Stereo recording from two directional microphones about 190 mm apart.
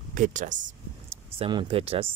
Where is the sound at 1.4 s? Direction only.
25° right (ahead or behind).